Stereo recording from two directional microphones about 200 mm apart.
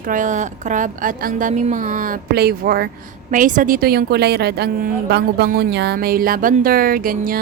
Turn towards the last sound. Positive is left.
turn(degrees=-45)  # may be behind; listen again after turning